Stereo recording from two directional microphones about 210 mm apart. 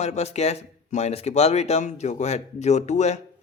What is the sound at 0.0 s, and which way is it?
Speech, 30° left (ahead or behind).